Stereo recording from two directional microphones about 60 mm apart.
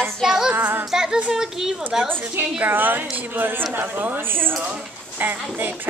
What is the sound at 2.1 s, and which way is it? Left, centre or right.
A woman's voice, right.